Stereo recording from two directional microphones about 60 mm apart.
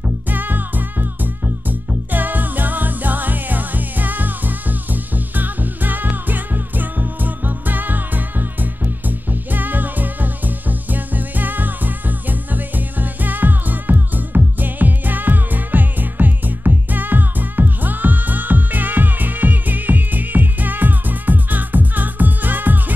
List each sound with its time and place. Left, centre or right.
0.0 s music: right